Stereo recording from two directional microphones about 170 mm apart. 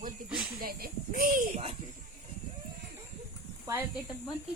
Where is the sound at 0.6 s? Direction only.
60° right (ahead or behind).